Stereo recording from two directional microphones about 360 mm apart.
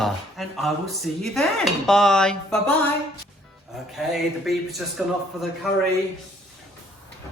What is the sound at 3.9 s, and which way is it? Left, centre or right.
Speech, centre.